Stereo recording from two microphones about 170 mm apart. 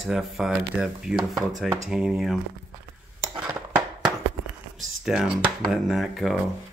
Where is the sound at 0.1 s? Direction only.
5° right (ahead or behind).